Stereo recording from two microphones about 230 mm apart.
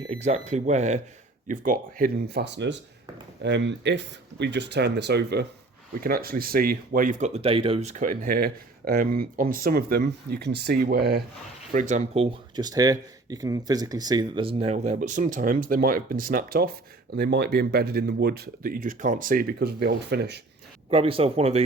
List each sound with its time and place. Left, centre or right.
0.1 s speech: right
11.7 s speech: right
20.9 s speech: right